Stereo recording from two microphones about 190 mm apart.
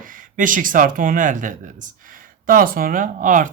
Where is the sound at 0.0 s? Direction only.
45° right (ahead or behind).